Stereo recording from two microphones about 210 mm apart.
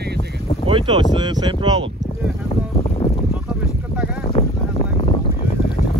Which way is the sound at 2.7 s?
30° left (ahead or behind).